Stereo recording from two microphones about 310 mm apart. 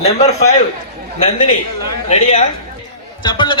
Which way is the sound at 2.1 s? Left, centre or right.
Left.